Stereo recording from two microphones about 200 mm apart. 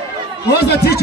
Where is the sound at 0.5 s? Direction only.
55° left (ahead or behind).